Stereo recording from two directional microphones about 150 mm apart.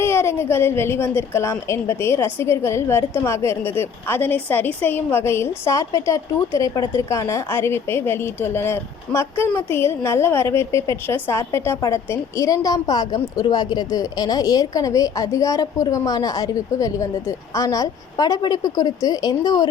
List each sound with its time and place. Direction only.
0.0 s a woman's voice: 15° left (ahead or behind)